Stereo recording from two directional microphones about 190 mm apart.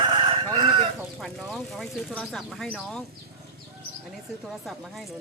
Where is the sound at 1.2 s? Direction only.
Centre (ahead or behind).